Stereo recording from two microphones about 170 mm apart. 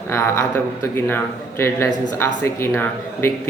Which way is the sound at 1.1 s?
15° left (ahead or behind).